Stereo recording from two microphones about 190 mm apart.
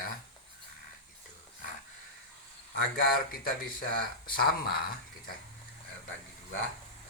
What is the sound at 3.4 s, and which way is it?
Speech, 50° left (ahead or behind).